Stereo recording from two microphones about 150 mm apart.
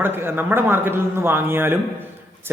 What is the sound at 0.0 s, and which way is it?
Speech, 15° right (ahead or behind).